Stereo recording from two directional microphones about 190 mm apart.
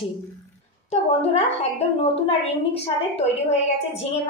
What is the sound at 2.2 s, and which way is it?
A woman's voice, 30° left (ahead or behind).